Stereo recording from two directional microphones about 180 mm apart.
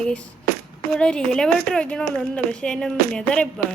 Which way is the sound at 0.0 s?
5° left (ahead or behind).